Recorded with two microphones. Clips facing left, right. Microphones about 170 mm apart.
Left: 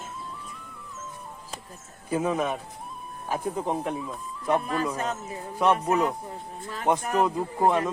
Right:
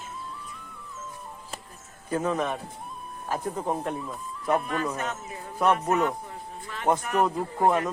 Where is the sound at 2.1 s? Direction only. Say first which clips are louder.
Left 1 dB; 10° left (ahead or behind).